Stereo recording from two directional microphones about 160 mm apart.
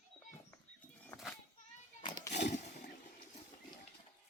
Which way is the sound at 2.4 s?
50° left (ahead or behind).